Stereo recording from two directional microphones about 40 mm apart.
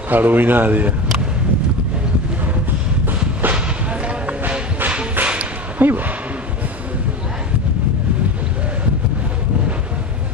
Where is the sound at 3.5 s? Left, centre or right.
Right.